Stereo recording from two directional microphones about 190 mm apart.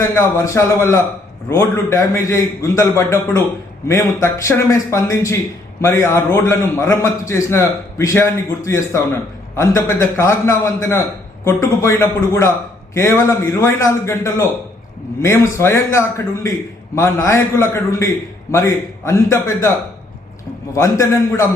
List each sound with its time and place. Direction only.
0.0 s a man's voice: 15° left (ahead or behind)
15.5 s a man's voice: 15° left (ahead or behind)
20.7 s a man's voice: 15° left (ahead or behind)